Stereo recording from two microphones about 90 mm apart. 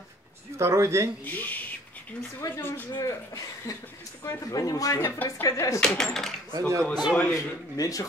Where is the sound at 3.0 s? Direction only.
40° left (ahead or behind).